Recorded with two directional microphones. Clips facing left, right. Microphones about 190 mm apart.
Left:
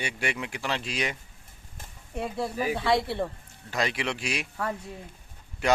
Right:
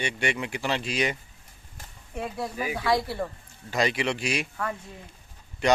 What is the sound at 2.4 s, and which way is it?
Speech, 30° left (ahead or behind).